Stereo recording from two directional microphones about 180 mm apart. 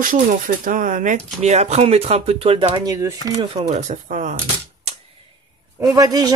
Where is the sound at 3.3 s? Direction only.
40° right (ahead or behind).